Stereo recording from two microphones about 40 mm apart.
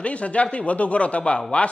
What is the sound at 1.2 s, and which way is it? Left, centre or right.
Speech, left.